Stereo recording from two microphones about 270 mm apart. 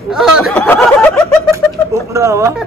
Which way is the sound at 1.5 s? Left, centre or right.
Centre.